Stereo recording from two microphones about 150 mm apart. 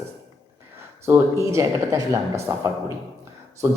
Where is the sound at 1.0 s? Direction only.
20° right (ahead or behind).